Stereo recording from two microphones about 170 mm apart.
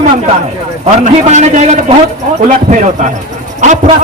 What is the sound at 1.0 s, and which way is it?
A man's voice, 45° right (ahead or behind).